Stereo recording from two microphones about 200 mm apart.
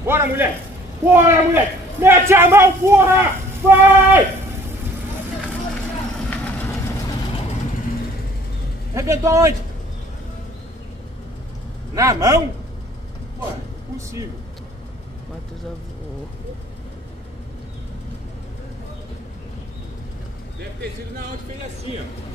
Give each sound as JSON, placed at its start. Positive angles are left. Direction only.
{"t": 0.0, "sound": "a man's voice", "side_deg": -10}
{"t": 6.3, "sound": "vehicle", "side_deg": 10}
{"t": 8.9, "sound": "a man's voice", "side_deg": -15}
{"t": 11.9, "sound": "a man's voice", "side_deg": -15}